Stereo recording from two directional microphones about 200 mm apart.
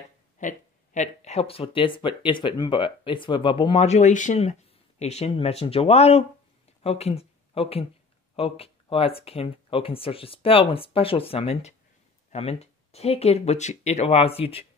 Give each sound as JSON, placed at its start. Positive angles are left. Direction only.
{"t": 0.4, "sound": "speech", "side_deg": 40}